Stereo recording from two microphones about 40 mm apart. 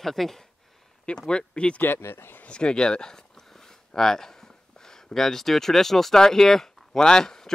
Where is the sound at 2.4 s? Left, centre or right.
Left.